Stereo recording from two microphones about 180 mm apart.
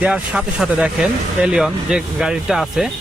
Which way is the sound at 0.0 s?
5° right (ahead or behind).